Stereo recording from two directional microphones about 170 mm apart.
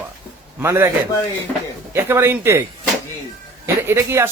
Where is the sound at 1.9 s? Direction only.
15° right (ahead or behind).